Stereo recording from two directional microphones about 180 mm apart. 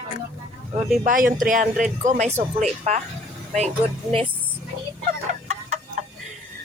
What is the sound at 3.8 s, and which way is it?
Speech, 35° right (ahead or behind).